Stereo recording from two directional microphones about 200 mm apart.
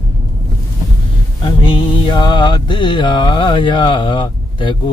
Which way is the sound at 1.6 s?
25° left (ahead or behind).